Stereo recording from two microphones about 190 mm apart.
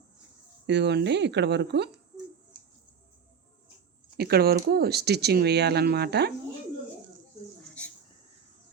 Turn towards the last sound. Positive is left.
turn(degrees=5)  # may be behind; listen again after turning